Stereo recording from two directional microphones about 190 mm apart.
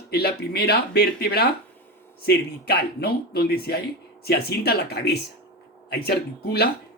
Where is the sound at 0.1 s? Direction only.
55° left (ahead or behind).